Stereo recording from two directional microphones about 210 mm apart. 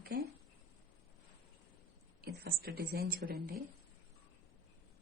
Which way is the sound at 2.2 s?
45° right (ahead or behind).